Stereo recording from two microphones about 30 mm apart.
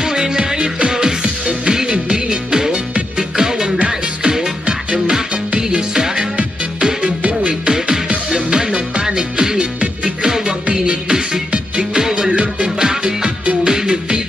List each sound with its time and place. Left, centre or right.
0.0 s music: right
3.7 s music: right
7.6 s music: right
11.5 s music: right
12.0 s music: centre
12.3 s music: right
12.7 s music: right